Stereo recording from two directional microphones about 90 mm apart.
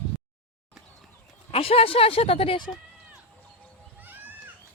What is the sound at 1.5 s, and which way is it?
Speech, 90° left.